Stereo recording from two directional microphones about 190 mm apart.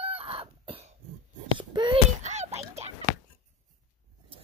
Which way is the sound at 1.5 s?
25° right (ahead or behind).